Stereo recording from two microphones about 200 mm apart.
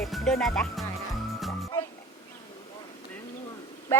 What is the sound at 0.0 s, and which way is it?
Speech, centre (ahead or behind).